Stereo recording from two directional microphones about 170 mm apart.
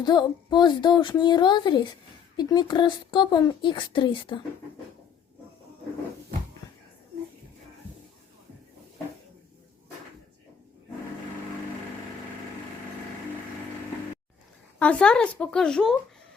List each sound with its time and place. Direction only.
0.0 s speech: 25° left (ahead or behind)
14.8 s speech: 5° left (ahead or behind)